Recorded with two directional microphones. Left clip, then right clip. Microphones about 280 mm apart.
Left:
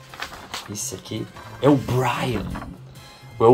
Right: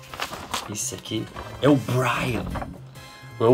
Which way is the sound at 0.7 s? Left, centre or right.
Centre.